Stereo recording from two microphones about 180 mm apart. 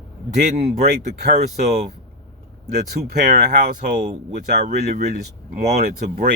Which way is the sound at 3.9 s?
40° right (ahead or behind).